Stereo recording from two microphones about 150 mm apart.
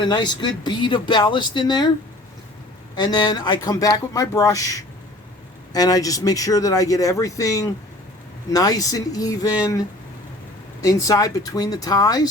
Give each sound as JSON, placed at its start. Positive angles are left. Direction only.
{"t": 0.0, "sound": "speech", "side_deg": 30}
{"t": 3.0, "sound": "speech", "side_deg": 25}
{"t": 10.8, "sound": "speech", "side_deg": 20}